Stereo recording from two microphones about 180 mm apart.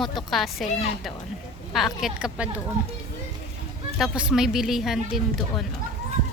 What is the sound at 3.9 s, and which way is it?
A woman's voice, 5° right (ahead or behind).